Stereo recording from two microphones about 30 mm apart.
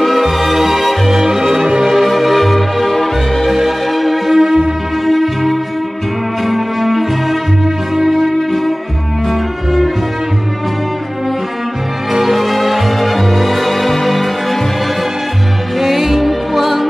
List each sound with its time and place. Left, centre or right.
0.0 s music: centre
2.0 s music: centre
12.1 s music: centre
15.8 s music: centre